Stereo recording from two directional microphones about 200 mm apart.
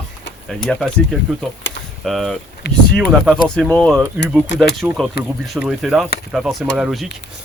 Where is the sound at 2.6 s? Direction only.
55° left (ahead or behind).